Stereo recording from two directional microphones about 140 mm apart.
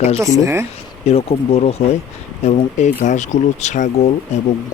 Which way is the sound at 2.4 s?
55° left (ahead or behind).